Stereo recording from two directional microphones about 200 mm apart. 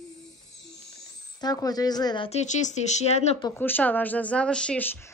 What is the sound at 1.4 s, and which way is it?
Speech, 20° left (ahead or behind).